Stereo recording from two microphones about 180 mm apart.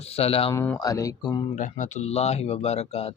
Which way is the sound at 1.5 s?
45° left (ahead or behind).